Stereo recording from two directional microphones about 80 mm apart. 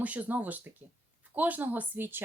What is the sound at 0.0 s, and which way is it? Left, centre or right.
A woman's voice, centre.